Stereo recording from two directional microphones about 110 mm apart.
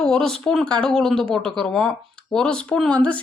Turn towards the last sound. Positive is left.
turn(degrees=10)  # may be behind; listen again after turning